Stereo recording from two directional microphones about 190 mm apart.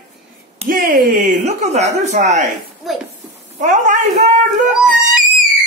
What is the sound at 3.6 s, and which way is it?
Speech, 40° right (ahead or behind).